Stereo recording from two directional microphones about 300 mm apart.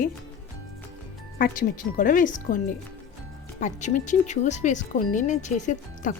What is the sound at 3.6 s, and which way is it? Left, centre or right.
Speech, left.